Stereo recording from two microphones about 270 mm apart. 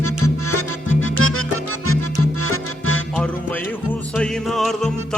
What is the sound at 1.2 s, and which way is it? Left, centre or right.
Music, left.